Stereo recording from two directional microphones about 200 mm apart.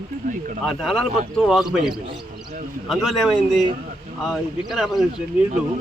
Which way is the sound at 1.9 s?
25° right (ahead or behind).